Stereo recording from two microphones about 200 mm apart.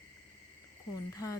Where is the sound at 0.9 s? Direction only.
15° left (ahead or behind).